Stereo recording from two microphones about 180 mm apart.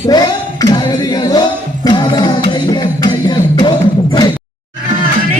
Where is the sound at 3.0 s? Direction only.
20° left (ahead or behind).